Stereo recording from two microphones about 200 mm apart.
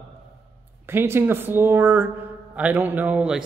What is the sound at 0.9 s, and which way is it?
A man's voice, 10° right (ahead or behind).